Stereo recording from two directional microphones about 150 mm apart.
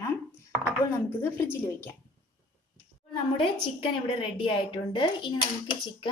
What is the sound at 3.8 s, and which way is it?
A woman's voice, 35° left (ahead or behind).